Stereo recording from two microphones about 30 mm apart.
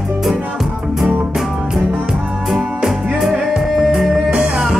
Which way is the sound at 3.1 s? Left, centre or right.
Centre.